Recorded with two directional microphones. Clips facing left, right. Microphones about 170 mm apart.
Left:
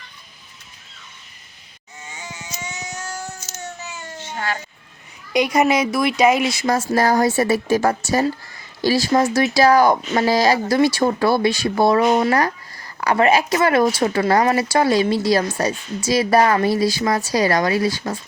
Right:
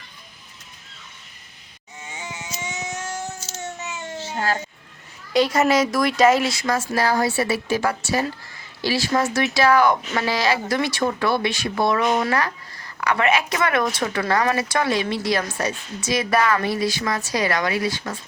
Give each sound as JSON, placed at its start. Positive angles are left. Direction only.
{"t": 2.1, "sound": "a sound", "side_deg": -25}
{"t": 4.2, "sound": "baby cry", "side_deg": -35}
{"t": 5.3, "sound": "a woman's voice", "side_deg": 15}
{"t": 6.7, "sound": "a woman's voice", "side_deg": 40}